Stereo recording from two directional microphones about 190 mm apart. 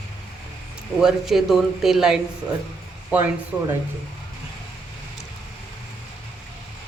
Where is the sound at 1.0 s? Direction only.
Centre (ahead or behind).